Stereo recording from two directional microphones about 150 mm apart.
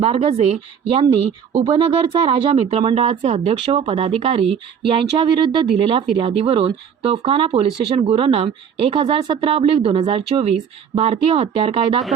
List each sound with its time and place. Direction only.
0.0 s speech: 40° right (ahead or behind)